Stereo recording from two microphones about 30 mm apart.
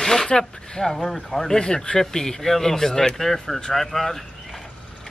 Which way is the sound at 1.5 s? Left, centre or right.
Left.